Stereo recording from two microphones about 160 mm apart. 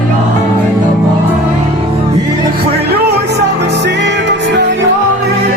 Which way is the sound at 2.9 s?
90° right.